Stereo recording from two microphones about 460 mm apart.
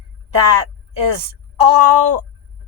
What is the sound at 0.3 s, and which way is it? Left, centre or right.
A woman's voice, right.